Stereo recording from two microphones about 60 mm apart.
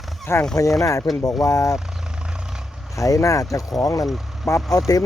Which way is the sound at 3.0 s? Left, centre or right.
Left.